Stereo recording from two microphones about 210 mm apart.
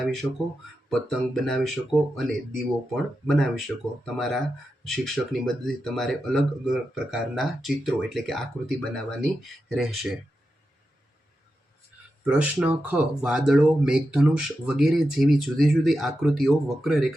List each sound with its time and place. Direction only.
0.0 s speech: centre (ahead or behind)
12.2 s speech: 5° right (ahead or behind)